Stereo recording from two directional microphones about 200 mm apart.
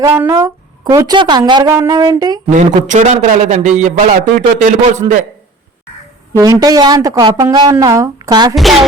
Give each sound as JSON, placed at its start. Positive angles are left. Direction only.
{"t": 0.0, "sound": "a woman's voice", "side_deg": -15}
{"t": 2.5, "sound": "a man's voice", "side_deg": -40}
{"t": 5.0, "sound": "a woman's voice", "side_deg": -25}
{"t": 6.3, "sound": "a woman's voice", "side_deg": -15}
{"t": 8.5, "sound": "a woman's voice", "side_deg": 0}